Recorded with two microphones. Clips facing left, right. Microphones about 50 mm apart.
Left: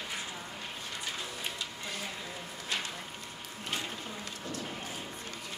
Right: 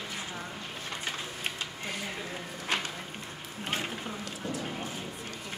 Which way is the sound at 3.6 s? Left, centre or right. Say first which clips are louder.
Right 4 dB; right.